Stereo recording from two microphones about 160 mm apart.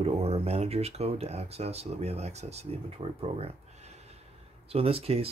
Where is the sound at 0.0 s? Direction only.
40° right (ahead or behind).